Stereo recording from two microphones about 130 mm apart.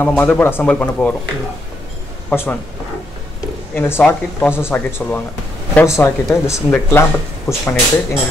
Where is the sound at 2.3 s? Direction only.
15° left (ahead or behind).